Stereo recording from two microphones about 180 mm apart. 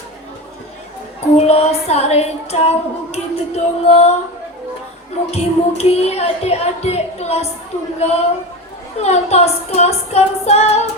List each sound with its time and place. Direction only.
1.4 s speech: 35° left (ahead or behind)
5.3 s speech: 35° left (ahead or behind)